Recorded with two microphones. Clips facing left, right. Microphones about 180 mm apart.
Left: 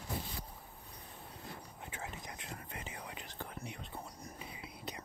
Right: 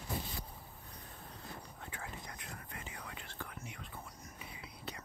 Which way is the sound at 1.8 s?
20° left (ahead or behind).